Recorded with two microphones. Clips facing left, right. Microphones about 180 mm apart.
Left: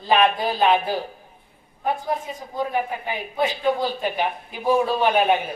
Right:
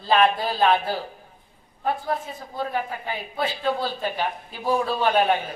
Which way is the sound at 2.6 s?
15° left (ahead or behind).